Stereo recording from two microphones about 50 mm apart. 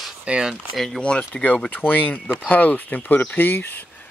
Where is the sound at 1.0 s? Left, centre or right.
Left.